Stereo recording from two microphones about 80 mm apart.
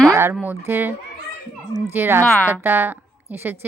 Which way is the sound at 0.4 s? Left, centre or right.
Right.